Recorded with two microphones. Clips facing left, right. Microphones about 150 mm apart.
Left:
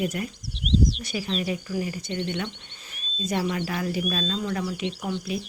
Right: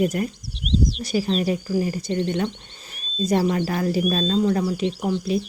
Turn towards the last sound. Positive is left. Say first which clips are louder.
# right 6 dB
turn(degrees=-35)  # may be behind; listen again after turning